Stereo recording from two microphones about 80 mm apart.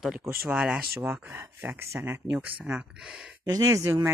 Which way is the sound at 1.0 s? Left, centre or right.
Right.